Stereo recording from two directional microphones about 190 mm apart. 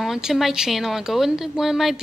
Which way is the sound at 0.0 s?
Centre (ahead or behind).